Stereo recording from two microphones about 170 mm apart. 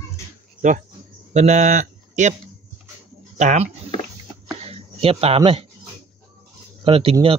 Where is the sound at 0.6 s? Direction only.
45° right (ahead or behind).